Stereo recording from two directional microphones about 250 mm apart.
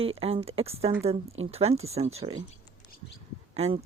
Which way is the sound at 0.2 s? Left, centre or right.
Right.